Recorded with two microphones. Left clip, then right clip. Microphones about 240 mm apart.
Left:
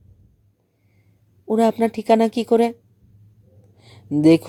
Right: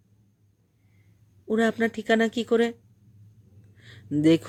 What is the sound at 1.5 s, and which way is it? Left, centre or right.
Speech, centre.